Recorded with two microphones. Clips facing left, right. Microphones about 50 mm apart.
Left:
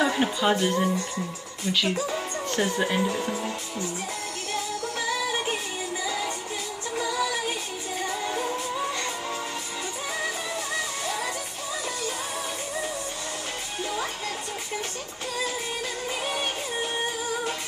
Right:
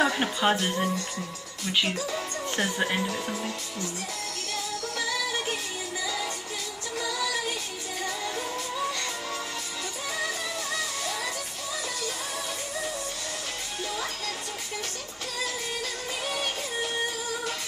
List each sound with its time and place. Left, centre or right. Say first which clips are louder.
0.0 s speech: left 1 dB; centre
2.0 s speech: left 3 dB; left
2.5 s speech: left 2 dB; centre
4.9 s music: left 2 dB; left
16.3 s music: right 1 dB; left